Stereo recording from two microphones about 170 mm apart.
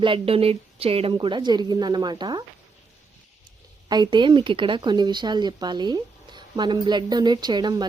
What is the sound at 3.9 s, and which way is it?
A woman's voice, 25° right (ahead or behind).